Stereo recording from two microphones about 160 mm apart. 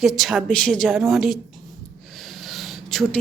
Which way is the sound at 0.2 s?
Centre (ahead or behind).